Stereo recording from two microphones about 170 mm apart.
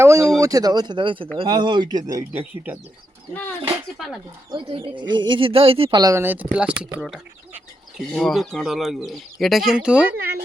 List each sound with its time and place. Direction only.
0.0 s a sound: 15° right (ahead or behind)
0.3 s speech: 20° right (ahead or behind)
3.9 s speech: centre (ahead or behind)
4.5 s speech: 30° right (ahead or behind); by 10.2 s 5° right (ahead or behind)